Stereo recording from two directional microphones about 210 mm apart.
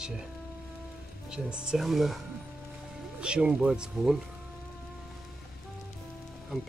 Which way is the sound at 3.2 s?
5° right (ahead or behind).